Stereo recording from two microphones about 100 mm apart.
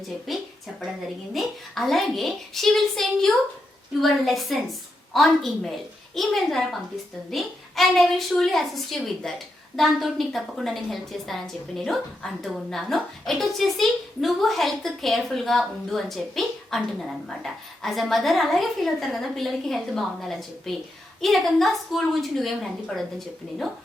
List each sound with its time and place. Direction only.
0.3 s a woman's voice: centre (ahead or behind)